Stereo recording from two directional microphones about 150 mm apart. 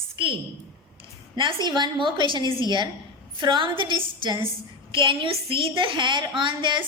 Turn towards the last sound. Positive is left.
turn(degrees=-30)  # may be behind; listen again after turning